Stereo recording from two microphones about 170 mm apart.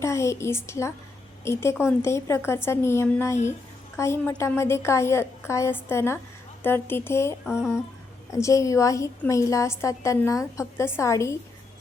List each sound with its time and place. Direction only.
0.0 s a woman's voice: 15° left (ahead or behind)
7.4 s a sound: 5° right (ahead or behind)
8.3 s a woman's voice: 20° left (ahead or behind)